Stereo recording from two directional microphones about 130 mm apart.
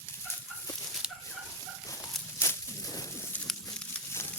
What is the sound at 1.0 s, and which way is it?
Fowl, 5° right (ahead or behind).